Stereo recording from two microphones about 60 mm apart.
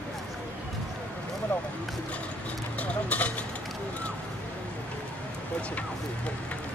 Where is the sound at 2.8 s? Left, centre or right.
Left.